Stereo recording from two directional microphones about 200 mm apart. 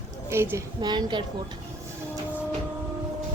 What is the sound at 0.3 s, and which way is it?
Speech, 15° right (ahead or behind).